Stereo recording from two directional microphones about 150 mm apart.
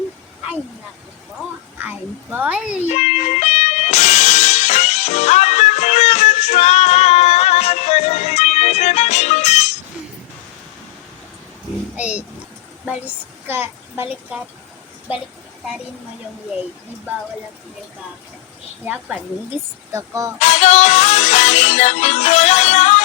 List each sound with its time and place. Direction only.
2.3 s a child's voice: 10° right (ahead or behind)
2.8 s music: 50° left (ahead or behind)
11.9 s a sound: 10° right (ahead or behind)
13.5 s a woman's voice: 15° right (ahead or behind)
18.9 s a child's voice: 5° right (ahead or behind)
19.9 s speech: 20° right (ahead or behind)
20.4 s music: 50° left (ahead or behind)